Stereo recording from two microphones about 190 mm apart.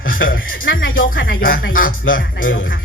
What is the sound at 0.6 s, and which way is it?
Speech, 90° left.